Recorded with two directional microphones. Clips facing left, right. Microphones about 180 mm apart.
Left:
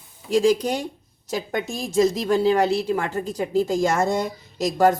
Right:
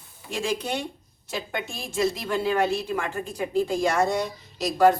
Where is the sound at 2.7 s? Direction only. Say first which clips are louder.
Left 5 dB; 75° left (ahead or behind).